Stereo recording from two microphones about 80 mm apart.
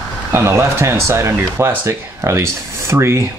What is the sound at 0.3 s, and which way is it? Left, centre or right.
Speech, right.